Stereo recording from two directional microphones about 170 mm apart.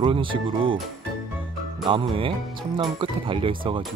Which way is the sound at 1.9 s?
30° right (ahead or behind).